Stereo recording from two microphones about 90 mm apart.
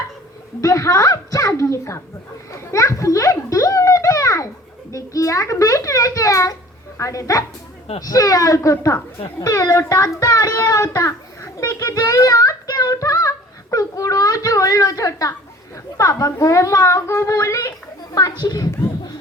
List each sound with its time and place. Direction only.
0.6 s a child's voice: 40° left (ahead or behind)
2.5 s a sound: 35° left (ahead or behind)
4.9 s a child's voice: 35° left (ahead or behind)